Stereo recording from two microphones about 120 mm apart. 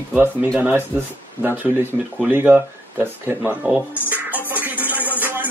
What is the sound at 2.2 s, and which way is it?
Speech, 15° right (ahead or behind).